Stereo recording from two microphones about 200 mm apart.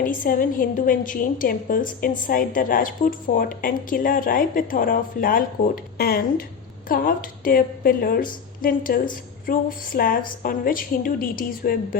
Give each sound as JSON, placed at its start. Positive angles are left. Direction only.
{"t": 0.0, "sound": "a woman's voice", "side_deg": 45}